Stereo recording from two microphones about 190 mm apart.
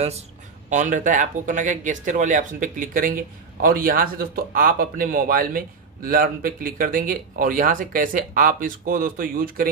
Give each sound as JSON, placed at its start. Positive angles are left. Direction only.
{"t": 0.7, "sound": "speech", "side_deg": -40}